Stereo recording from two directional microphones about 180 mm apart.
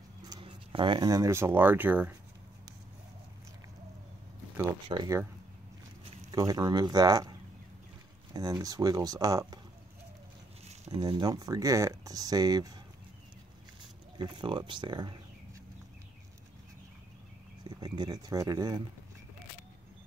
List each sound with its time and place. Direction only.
0.3 s speech: 25° right (ahead or behind); by 2.1 s 10° right (ahead or behind)
4.8 s speech: 25° right (ahead or behind)
6.3 s speech: 20° right (ahead or behind)
10.9 s speech: 25° right (ahead or behind)
14.1 s speech: 25° right (ahead or behind)
17.6 s speech: 25° right (ahead or behind)